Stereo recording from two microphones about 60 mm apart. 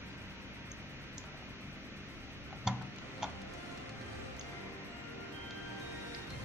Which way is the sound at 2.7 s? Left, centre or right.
Centre.